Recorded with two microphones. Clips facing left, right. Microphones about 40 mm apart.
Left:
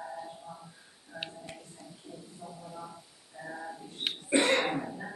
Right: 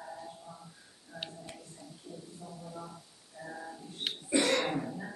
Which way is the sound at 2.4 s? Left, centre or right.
Centre.